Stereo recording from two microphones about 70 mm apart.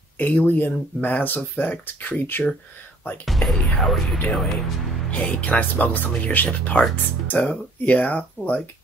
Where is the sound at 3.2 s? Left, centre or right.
Centre.